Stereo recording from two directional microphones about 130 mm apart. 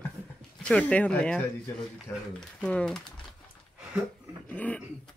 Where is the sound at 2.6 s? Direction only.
10° left (ahead or behind).